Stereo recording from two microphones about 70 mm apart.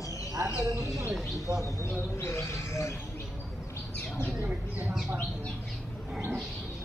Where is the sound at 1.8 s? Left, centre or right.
Left.